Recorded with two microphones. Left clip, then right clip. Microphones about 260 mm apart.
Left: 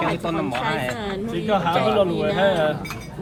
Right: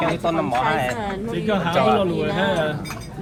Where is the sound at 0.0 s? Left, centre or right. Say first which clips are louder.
Right 2 dB; centre.